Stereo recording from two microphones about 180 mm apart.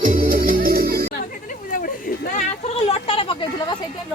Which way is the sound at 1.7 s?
50° left (ahead or behind).